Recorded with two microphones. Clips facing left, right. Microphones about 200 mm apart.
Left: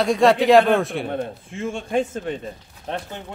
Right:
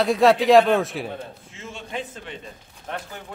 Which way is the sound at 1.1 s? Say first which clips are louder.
Left 8 dB; 50° left (ahead or behind).